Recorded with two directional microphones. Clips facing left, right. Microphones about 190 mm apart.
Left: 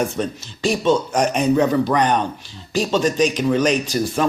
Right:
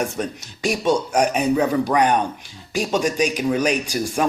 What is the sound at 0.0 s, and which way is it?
Speech, 10° right (ahead or behind).